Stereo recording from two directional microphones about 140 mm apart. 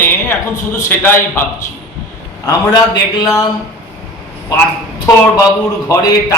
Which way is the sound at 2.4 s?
25° left (ahead or behind).